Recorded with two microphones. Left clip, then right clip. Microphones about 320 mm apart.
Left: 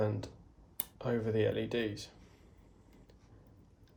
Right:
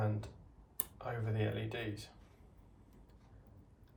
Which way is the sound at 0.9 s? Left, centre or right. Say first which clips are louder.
Left 8 dB; left.